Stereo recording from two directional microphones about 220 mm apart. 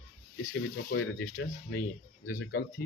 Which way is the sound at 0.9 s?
50° left (ahead or behind).